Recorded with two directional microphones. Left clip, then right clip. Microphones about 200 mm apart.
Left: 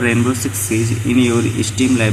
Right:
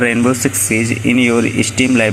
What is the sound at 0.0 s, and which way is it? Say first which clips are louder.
Speech: right 3 dB; 25° right (ahead or behind).